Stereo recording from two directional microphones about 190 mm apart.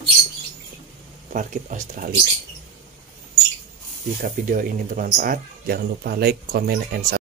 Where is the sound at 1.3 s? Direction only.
45° right (ahead or behind).